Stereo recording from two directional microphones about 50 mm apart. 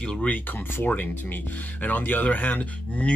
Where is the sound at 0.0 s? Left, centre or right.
Centre.